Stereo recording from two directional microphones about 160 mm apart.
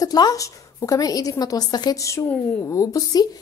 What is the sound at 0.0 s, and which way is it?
A woman's voice, 25° left (ahead or behind).